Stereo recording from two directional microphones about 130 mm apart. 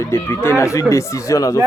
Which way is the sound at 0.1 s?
20° left (ahead or behind).